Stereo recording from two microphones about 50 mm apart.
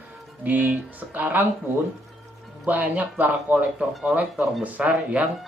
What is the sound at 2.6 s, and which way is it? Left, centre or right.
Speech, right.